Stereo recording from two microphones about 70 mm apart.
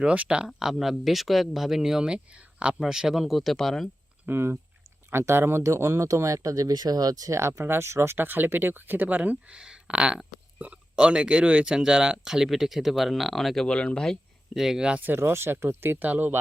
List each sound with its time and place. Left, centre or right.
0.0 s speech: centre
2.7 s speech: centre
4.3 s speech: right
7.3 s speech: right; by 13.7 s centre
13.7 s speech: centre
14.5 s speech: centre
15.0 s speech: right